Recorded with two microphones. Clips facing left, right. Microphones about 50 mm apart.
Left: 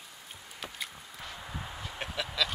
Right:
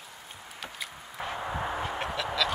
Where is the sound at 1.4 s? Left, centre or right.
Right.